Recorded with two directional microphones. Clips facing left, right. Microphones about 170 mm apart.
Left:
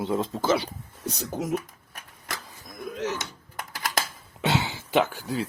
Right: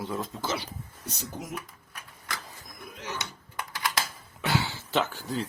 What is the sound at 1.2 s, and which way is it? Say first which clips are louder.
Speech: left 8 dB; 80° left.